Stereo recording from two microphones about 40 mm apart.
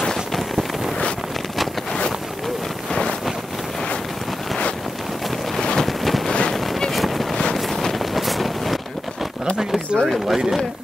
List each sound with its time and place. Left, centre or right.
0.0 s vehicle: centre
5.6 s a sound: centre
5.9 s a sound: centre
6.5 s boat: centre
7.5 s wind noise: centre
10.0 s speech: centre